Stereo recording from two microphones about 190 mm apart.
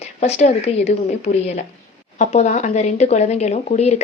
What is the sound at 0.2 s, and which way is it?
Speech, 35° left (ahead or behind).